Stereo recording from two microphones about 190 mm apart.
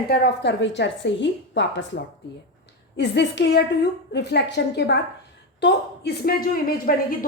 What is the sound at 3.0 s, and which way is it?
A woman's voice, 65° left (ahead or behind).